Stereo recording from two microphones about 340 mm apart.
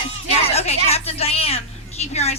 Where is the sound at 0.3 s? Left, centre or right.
Centre.